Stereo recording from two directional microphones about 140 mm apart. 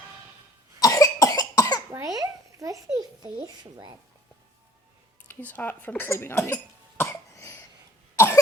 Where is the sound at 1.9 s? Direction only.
25° right (ahead or behind).